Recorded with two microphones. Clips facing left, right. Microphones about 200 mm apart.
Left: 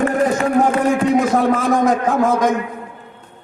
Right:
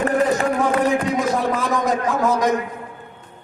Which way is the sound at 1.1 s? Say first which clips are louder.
Left 5 dB; 50° left (ahead or behind).